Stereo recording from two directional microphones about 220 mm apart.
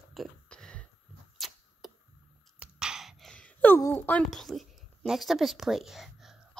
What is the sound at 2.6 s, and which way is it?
Speech, 5° right (ahead or behind).